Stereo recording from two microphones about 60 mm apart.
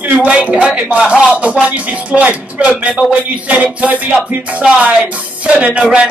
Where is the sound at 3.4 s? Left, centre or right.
Right.